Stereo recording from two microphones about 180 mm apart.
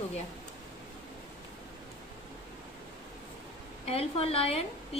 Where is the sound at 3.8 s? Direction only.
35° left (ahead or behind).